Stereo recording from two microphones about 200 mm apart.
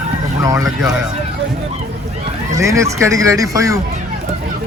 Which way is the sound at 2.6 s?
15° right (ahead or behind).